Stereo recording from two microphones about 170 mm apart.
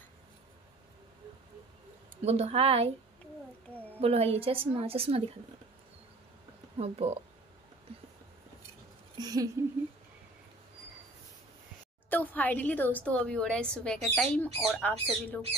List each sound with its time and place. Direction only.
2.2 s a woman's voice: 40° right (ahead or behind)
4.0 s a woman's voice: 35° right (ahead or behind)
6.8 s a woman's voice: 40° right (ahead or behind)
9.2 s a sound: 20° right (ahead or behind)
12.1 s a woman's voice: 10° left (ahead or behind)